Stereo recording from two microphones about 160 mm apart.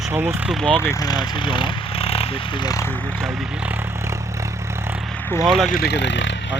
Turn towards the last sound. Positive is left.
turn(degrees=90)